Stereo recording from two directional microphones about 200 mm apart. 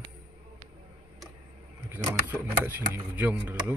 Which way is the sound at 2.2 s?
10° right (ahead or behind).